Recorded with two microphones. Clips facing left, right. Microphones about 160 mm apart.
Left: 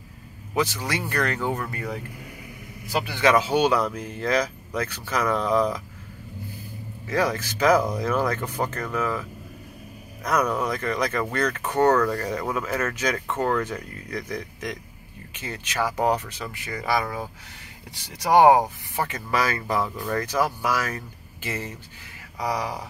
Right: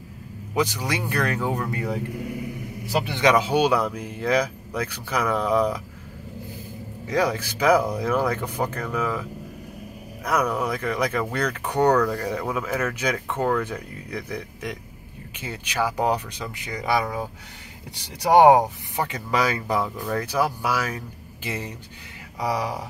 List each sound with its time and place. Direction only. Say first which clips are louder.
0.6 s speech: right 1 dB; 15° right (ahead or behind)
2.9 s a man's voice: right 2 dB; 30° right (ahead or behind)
3.2 s speech: even; 15° right (ahead or behind)
7.1 s speech: right 1 dB; 15° right (ahead or behind)
10.2 s speech: even; 10° right (ahead or behind)
18.5 s speech: right 2 dB; 15° right (ahead or behind)